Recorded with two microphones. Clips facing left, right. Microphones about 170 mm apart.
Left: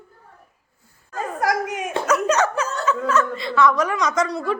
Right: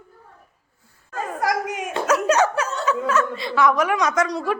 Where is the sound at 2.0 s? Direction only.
10° right (ahead or behind).